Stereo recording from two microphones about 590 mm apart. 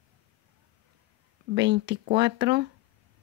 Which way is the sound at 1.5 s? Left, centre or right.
Centre.